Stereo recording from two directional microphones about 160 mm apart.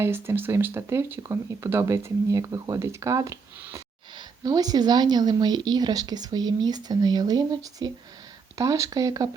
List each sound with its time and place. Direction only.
0.0 s a woman's voice: 15° right (ahead or behind)